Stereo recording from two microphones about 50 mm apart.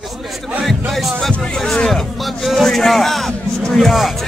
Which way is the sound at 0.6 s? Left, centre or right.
Centre.